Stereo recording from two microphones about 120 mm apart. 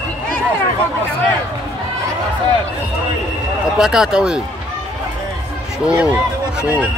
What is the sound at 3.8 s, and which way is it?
Speech, 5° right (ahead or behind).